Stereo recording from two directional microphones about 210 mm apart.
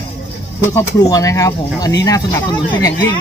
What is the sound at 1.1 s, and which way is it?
Speech, 15° left (ahead or behind).